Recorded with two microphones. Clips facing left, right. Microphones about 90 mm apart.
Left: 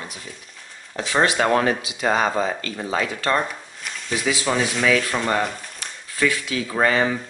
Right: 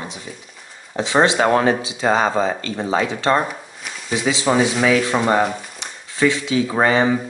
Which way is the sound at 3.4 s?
5° right (ahead or behind).